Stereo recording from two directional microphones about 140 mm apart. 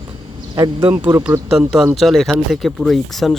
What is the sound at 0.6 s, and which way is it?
Speech, 25° right (ahead or behind).